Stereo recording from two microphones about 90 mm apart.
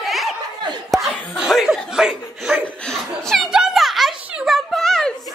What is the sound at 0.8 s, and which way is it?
Chuckle, centre (ahead or behind).